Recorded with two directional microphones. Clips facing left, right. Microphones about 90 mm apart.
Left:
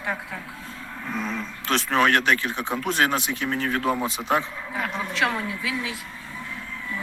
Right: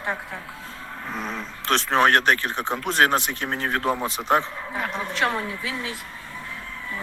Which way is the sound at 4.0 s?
10° left (ahead or behind).